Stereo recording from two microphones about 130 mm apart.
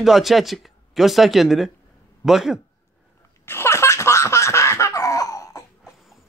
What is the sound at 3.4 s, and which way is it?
Laughter, 20° left (ahead or behind).